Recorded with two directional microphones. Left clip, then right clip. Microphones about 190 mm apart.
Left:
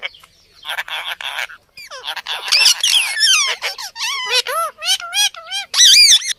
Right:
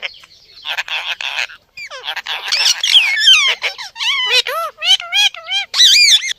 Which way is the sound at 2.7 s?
15° right (ahead or behind).